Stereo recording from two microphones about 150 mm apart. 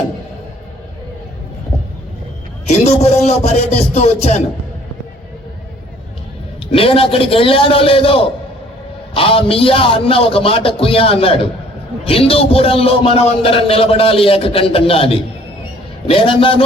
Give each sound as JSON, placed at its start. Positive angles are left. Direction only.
{"t": 2.6, "sound": "speech", "side_deg": 45}
{"t": 6.7, "sound": "a man's voice", "side_deg": 40}